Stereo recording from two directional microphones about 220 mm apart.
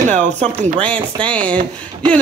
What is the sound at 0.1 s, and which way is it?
Speech, 30° right (ahead or behind).